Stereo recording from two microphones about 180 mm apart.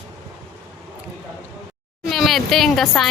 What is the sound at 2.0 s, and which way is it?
A woman's voice, centre (ahead or behind).